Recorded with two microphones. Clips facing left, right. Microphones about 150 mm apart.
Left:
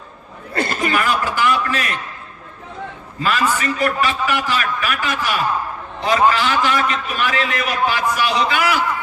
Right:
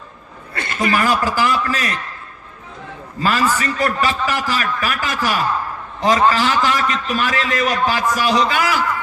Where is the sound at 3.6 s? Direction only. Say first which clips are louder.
Even; 40° right (ahead or behind).